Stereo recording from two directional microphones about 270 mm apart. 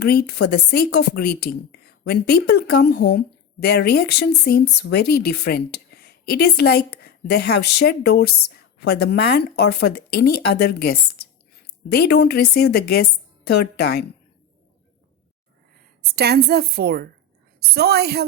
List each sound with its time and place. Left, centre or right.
0.0 s speech: left
16.0 s a woman's voice: right